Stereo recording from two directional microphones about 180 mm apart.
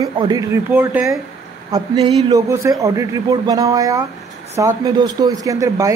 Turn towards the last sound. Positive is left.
turn(degrees=-20)  # may be behind; listen again after turning